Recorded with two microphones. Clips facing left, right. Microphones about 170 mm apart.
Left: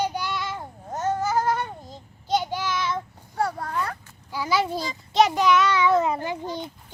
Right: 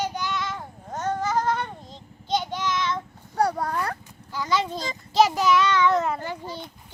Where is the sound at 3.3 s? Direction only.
40° right (ahead or behind).